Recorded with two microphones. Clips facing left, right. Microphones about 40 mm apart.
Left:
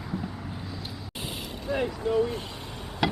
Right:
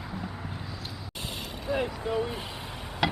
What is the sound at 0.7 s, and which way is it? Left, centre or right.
Vehicle, centre.